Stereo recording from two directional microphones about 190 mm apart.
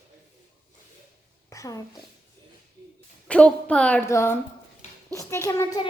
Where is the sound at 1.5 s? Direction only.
15° left (ahead or behind).